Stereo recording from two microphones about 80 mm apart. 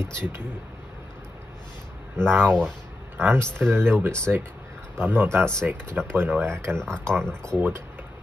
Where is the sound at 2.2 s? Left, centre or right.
Right.